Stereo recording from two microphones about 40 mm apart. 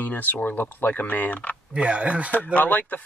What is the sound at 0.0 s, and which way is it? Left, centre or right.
Speech, left.